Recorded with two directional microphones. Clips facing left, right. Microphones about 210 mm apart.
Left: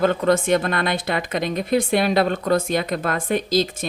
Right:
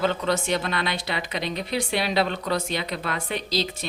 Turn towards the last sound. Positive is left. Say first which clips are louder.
# left 7 dB
turn(degrees=50)  # may be behind; listen again after turning